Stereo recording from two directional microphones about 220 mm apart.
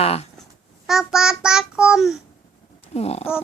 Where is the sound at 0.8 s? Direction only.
Centre (ahead or behind).